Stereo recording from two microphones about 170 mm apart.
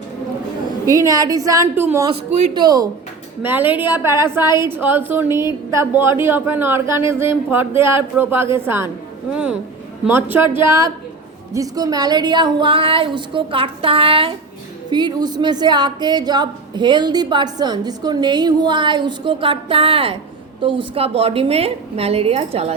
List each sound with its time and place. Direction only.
0.9 s a woman's voice: 20° right (ahead or behind)
2.6 s a woman's voice: 25° right (ahead or behind)
3.4 s a woman's voice: 10° right (ahead or behind); by 22.7 s 35° right (ahead or behind)